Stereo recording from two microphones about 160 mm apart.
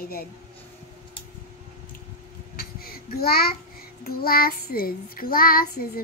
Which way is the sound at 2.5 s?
70° left (ahead or behind).